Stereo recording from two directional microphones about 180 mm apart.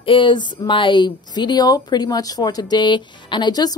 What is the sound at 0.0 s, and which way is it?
Speech, 30° left (ahead or behind).